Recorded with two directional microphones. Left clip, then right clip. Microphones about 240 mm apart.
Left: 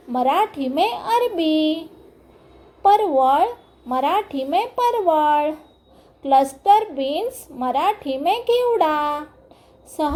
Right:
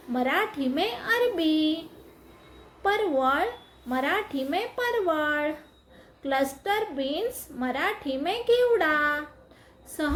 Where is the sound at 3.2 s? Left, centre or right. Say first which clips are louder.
Left 8 dB; centre.